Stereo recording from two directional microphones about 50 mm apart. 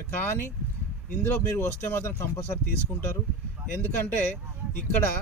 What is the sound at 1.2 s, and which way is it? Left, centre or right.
Speech, left.